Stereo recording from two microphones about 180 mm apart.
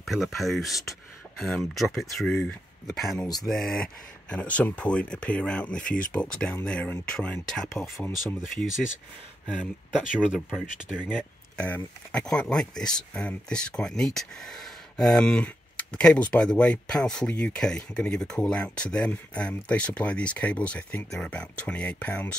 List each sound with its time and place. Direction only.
0.0 s speech: centre (ahead or behind)
5.8 s speech: 50° left (ahead or behind)
6.1 s speech: 5° left (ahead or behind)
10.2 s speech: 5° right (ahead or behind)
11.0 s speech: 10° left (ahead or behind)